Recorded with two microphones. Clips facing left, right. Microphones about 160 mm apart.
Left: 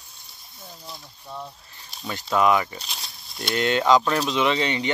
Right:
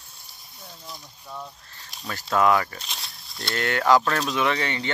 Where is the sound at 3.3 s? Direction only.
20° left (ahead or behind).